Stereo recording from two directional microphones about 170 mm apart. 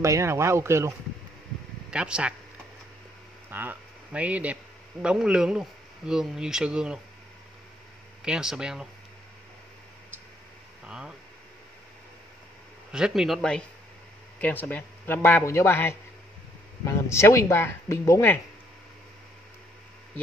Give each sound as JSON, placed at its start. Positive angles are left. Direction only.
{"t": 0.0, "sound": "speech", "side_deg": -15}
{"t": 1.9, "sound": "speech", "side_deg": -5}
{"t": 3.4, "sound": "speech", "side_deg": -10}
{"t": 8.2, "sound": "speech", "side_deg": -5}
{"t": 10.9, "sound": "speech", "side_deg": -5}
{"t": 12.9, "sound": "a man's voice", "side_deg": -5}